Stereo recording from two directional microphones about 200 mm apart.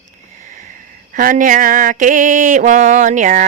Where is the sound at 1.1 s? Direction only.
45° right (ahead or behind).